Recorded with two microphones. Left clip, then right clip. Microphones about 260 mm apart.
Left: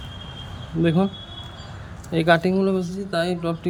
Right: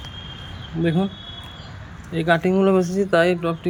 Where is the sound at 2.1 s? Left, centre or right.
Centre.